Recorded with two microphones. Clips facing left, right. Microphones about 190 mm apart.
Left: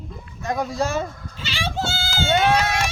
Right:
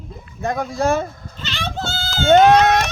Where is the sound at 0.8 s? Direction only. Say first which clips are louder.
Right 7 dB; 55° right (ahead or behind).